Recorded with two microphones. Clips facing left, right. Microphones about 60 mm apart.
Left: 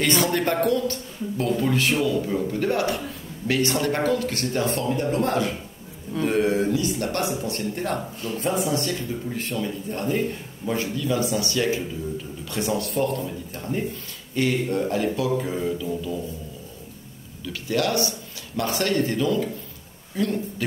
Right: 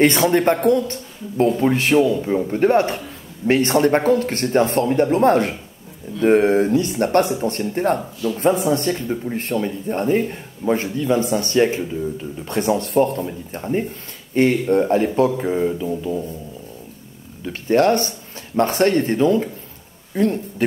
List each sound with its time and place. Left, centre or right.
0.0 s speech: right
17.4 s speech: right